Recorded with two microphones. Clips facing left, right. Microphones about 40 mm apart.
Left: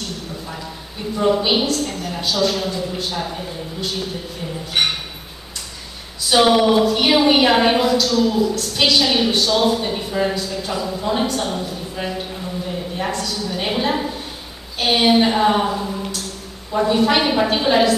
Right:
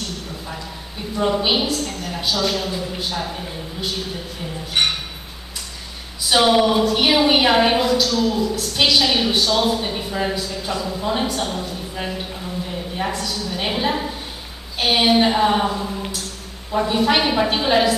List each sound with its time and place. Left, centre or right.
1.1 s a woman's voice: centre
6.2 s a woman's voice: centre